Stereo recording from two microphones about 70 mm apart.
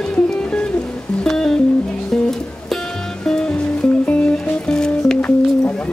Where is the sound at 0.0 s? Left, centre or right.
Centre.